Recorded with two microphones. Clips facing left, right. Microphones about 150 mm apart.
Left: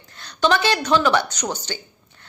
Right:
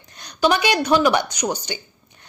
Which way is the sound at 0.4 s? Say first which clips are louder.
Right 1 dB; 15° right (ahead or behind).